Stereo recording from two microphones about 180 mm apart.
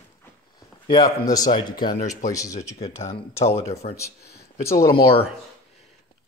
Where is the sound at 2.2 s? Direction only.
20° left (ahead or behind).